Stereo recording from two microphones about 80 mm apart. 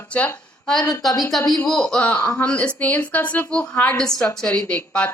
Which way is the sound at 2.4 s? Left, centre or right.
Centre.